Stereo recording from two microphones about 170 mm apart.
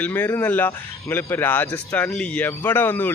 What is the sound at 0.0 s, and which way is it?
Speech, 10° left (ahead or behind).